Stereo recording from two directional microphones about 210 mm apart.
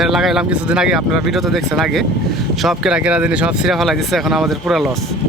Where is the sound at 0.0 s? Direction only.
Centre (ahead or behind).